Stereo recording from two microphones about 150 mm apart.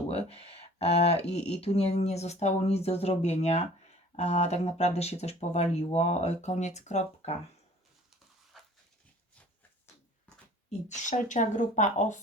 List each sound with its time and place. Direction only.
0.1 s speech: 40° left (ahead or behind)
8.5 s dog: centre (ahead or behind)
10.7 s speech: 55° left (ahead or behind)